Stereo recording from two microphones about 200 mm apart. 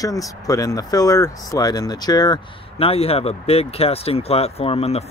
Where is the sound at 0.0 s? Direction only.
15° left (ahead or behind).